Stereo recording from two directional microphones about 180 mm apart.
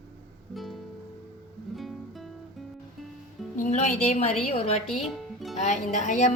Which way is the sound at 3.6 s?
40° left (ahead or behind).